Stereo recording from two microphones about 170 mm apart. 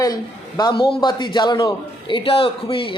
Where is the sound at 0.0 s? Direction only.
20° left (ahead or behind).